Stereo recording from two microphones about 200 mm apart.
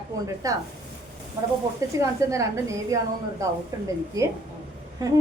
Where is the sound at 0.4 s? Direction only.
15° right (ahead or behind).